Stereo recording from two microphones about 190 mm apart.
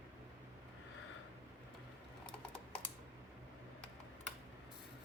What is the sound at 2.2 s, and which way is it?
Typing, 5° left (ahead or behind).